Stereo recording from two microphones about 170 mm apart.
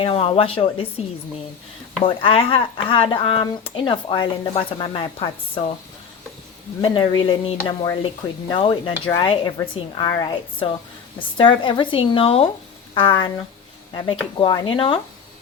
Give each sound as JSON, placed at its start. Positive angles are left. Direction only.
{"t": 0.0, "sound": "speech", "side_deg": 35}
{"t": 2.0, "sound": "speech", "side_deg": 30}
{"t": 6.8, "sound": "speech", "side_deg": 25}
{"t": 14.4, "sound": "speech", "side_deg": 30}